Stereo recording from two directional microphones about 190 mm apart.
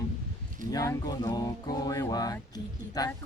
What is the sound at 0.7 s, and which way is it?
Music, 20° left (ahead or behind).